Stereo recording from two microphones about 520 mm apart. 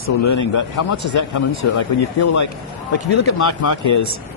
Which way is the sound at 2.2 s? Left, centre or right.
Left.